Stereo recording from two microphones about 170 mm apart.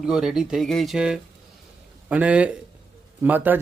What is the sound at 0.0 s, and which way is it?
A man's voice, 5° right (ahead or behind).